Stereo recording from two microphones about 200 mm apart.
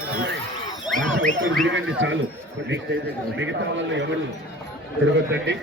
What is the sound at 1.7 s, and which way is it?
Speech, 70° right (ahead or behind).